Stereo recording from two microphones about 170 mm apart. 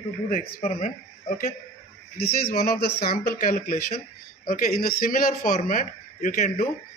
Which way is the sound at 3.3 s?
50° left (ahead or behind).